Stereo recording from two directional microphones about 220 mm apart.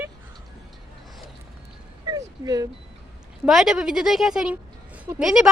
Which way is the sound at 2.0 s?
15° right (ahead or behind).